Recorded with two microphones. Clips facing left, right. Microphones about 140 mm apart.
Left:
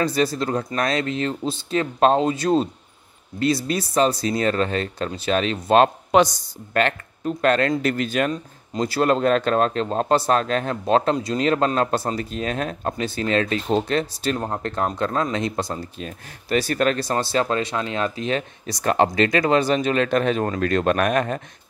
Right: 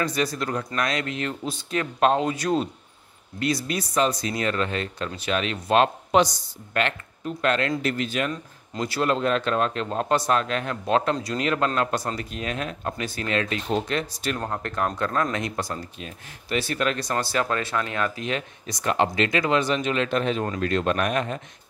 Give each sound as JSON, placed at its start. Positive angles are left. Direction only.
{"t": 0.0, "sound": "a man's voice", "side_deg": 30}
{"t": 16.0, "sound": "speech", "side_deg": 40}